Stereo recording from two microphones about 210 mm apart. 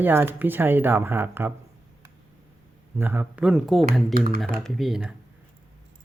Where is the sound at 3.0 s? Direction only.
10° right (ahead or behind).